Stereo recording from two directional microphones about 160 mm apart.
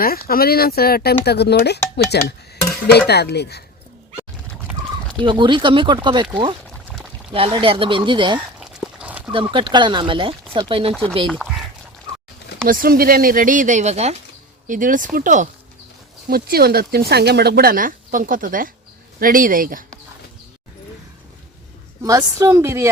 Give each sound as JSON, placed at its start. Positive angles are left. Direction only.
{"t": 0.0, "sound": "speech", "side_deg": 70}
{"t": 2.0, "sound": "speech", "side_deg": 75}
{"t": 3.1, "sound": "speech", "side_deg": 90}
{"t": 5.2, "sound": "speech", "side_deg": -30}
{"t": 8.5, "sound": "a sound", "side_deg": -5}
{"t": 9.3, "sound": "speech", "side_deg": -30}
{"t": 11.3, "sound": "speech", "side_deg": 0}
{"t": 12.6, "sound": "speech", "side_deg": -65}
{"t": 14.7, "sound": "speech", "side_deg": -55}
{"t": 16.3, "sound": "speech", "side_deg": -70}
{"t": 22.0, "sound": "speech", "side_deg": -20}